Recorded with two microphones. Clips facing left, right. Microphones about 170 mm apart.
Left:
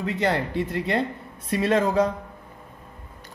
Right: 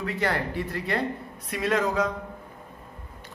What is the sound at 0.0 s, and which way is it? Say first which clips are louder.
A man's voice: left 3 dB; 20° left (ahead or behind).